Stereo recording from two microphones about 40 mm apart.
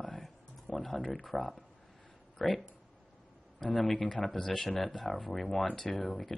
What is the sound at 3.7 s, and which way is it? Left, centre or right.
Speech, centre.